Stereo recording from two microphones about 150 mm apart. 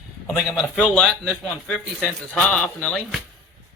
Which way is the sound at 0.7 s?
5° left (ahead or behind).